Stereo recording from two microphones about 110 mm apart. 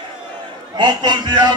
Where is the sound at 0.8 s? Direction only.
45° right (ahead or behind).